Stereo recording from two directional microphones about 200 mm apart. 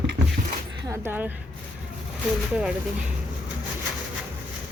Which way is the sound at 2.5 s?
5° right (ahead or behind).